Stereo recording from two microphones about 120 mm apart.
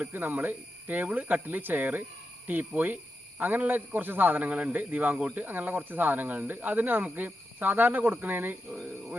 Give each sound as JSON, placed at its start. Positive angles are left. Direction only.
{"t": 0.0, "sound": "a man's voice", "side_deg": -15}